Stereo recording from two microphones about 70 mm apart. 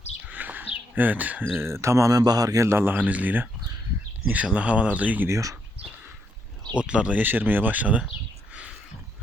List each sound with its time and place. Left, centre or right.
0.3 s a sound: right
1.5 s a man's voice: right
2.6 s speech: right
5.3 s a man's voice: right
6.7 s speech: centre
7.2 s speech: right